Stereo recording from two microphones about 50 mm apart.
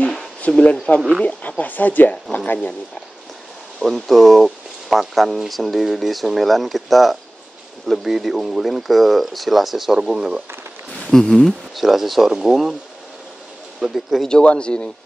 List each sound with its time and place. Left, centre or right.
0.5 s speech: centre
1.6 s speech: left
3.8 s speech: centre
11.1 s speech: centre
13.7 s speech: centre
14.4 s speech: left